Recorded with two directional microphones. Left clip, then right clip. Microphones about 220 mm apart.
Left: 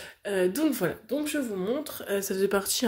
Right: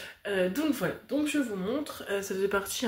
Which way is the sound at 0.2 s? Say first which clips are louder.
Left 3 dB; 40° left (ahead or behind).